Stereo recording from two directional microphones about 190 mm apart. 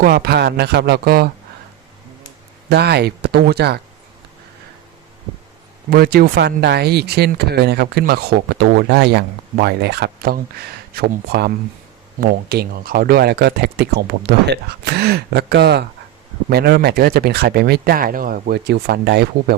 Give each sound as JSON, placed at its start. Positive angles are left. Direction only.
{"t": 0.0, "sound": "speech", "side_deg": -55}
{"t": 2.6, "sound": "speech", "side_deg": -60}
{"t": 5.9, "sound": "speech", "side_deg": -55}